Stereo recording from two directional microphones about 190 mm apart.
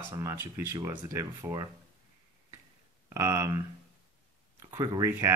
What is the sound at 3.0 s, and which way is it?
Speech, 15° right (ahead or behind).